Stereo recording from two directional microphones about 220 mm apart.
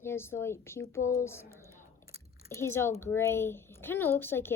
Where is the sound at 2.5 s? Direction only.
10° left (ahead or behind).